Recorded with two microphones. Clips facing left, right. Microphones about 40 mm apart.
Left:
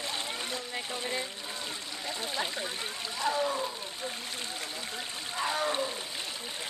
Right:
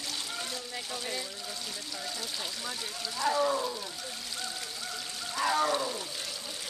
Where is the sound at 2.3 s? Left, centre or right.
Left.